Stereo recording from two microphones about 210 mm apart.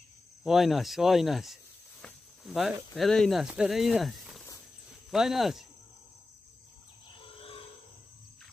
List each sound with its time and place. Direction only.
0.4 s speech: centre (ahead or behind)
7.2 s wild animals: 25° left (ahead or behind)